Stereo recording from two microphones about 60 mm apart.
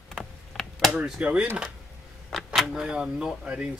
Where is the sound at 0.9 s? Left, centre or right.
Centre.